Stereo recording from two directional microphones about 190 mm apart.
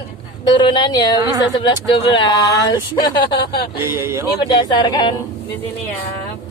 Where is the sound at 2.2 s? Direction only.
20° left (ahead or behind).